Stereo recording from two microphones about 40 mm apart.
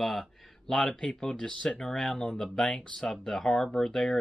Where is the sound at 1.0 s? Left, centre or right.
Left.